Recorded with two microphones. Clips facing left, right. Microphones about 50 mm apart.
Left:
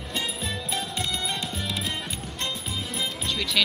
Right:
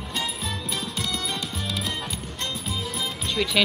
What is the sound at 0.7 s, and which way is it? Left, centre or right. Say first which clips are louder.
Music: left 1 dB; left.